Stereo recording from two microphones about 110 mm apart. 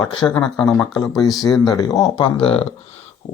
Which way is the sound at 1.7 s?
35° left (ahead or behind).